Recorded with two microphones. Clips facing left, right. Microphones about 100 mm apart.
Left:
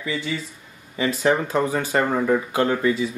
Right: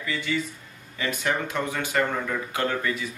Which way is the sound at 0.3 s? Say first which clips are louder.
Right 1 dB; 20° left (ahead or behind).